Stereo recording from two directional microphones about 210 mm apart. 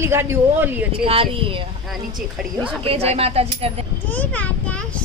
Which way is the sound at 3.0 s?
30° right (ahead or behind).